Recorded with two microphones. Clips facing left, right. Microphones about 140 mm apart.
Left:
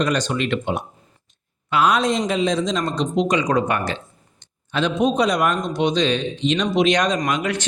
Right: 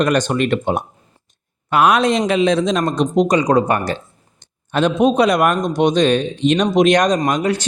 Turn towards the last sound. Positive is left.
turn(degrees=-35)  # may be behind; listen again after turning